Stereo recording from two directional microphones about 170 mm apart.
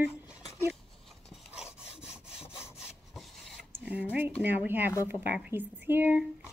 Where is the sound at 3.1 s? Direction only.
Centre (ahead or behind).